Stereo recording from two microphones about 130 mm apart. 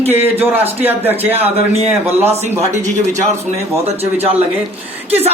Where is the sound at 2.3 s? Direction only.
55° right (ahead or behind).